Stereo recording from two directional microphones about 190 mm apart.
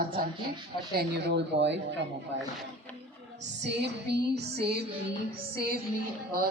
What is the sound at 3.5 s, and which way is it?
Music, 65° right (ahead or behind).